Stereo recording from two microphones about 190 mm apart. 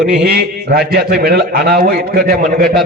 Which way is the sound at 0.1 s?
60° right (ahead or behind).